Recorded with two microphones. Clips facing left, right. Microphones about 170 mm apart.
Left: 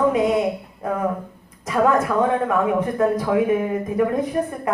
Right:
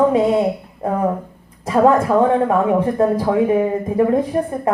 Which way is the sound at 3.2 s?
30° right (ahead or behind).